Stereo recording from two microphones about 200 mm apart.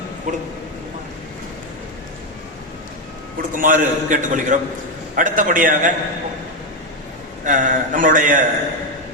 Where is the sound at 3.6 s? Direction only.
40° right (ahead or behind).